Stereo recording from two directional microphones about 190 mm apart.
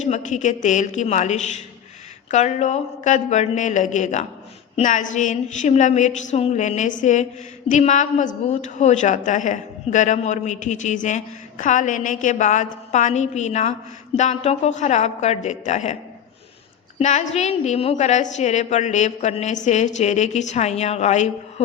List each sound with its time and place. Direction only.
0.0 s a woman's voice: 40° left (ahead or behind)
17.0 s a woman's voice: 40° left (ahead or behind)